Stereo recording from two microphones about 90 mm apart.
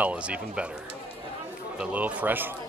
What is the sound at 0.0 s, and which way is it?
Speech, 15° right (ahead or behind).